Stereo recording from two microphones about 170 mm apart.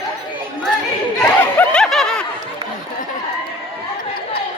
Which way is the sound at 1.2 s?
5° left (ahead or behind).